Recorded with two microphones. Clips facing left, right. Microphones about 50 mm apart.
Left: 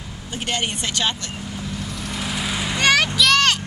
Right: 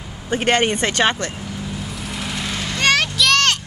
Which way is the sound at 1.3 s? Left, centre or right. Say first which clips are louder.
Right 1 dB; centre.